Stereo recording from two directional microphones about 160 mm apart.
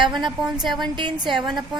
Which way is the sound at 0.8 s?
30° right (ahead or behind).